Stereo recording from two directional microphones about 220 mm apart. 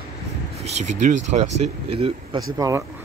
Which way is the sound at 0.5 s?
30° right (ahead or behind).